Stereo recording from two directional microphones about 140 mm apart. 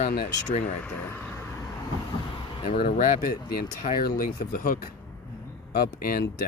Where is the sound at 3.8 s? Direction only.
90° left.